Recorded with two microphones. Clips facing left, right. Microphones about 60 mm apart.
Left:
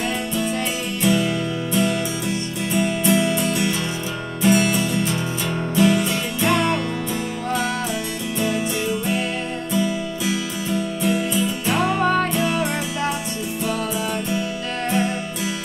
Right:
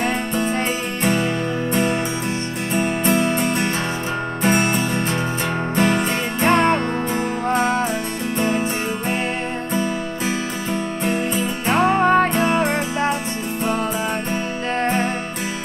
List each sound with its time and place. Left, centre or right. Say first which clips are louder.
0.0 s music: right 2 dB; right
9.8 s music: left 2 dB; right
14.3 s music: right 2 dB; right